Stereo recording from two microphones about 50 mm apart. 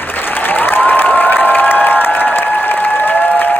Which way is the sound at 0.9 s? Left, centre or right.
Left.